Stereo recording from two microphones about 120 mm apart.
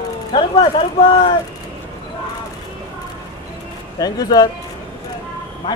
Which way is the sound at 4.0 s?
30° left (ahead or behind).